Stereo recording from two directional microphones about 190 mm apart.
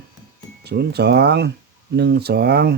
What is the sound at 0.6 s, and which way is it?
Speech, 60° right (ahead or behind).